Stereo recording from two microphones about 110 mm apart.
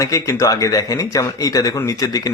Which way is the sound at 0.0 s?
30° left (ahead or behind).